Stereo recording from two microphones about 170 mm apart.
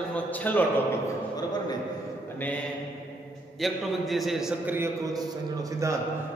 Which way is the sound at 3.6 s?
Centre (ahead or behind).